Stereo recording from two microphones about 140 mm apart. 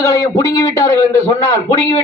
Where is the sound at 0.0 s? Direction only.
25° left (ahead or behind).